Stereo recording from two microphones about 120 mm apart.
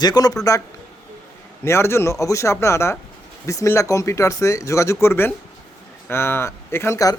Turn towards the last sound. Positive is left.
turn(degrees=25)  # may be behind; listen again after turning